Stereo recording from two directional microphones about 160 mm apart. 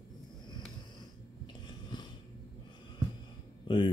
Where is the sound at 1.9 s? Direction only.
30° left (ahead or behind).